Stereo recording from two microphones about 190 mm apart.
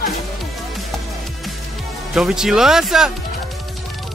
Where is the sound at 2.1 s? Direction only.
5° right (ahead or behind).